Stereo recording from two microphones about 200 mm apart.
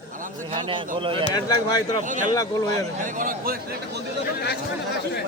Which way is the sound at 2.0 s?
40° right (ahead or behind).